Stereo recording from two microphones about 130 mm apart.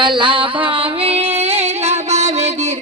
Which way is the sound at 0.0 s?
40° right (ahead or behind).